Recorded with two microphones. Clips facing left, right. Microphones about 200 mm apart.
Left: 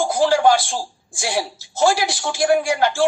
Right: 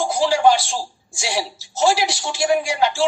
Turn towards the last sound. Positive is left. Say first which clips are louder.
# left 1 dB
turn(degrees=50)  # may be behind; listen again after turning